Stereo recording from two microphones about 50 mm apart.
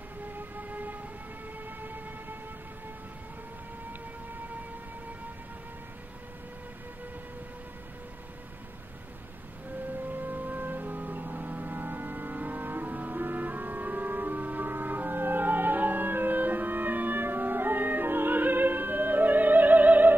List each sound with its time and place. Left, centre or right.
0.6 s vehicle: right
1.8 s train: right
9.9 s organ: right